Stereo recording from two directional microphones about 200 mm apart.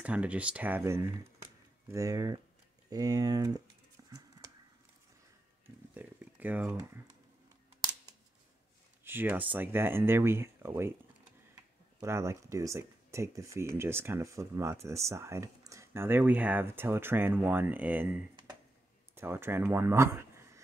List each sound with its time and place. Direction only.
0.0 s speech: 5° right (ahead or behind)
5.9 s a sound: 10° right (ahead or behind)
9.0 s speech: 10° right (ahead or behind)
12.0 s speech: 15° right (ahead or behind)